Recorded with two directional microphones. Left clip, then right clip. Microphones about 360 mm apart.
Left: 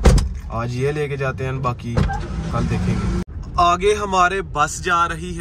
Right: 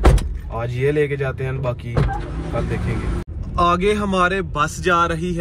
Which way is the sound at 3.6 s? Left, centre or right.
Centre.